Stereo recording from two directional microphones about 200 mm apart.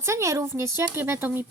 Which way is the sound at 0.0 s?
15° right (ahead or behind).